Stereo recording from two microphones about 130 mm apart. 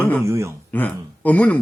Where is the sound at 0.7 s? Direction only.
10° left (ahead or behind).